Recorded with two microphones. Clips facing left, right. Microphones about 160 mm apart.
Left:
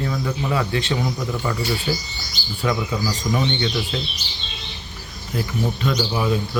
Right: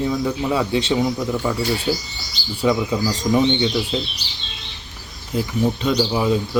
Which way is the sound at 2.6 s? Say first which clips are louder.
Right 4 dB; 20° right (ahead or behind).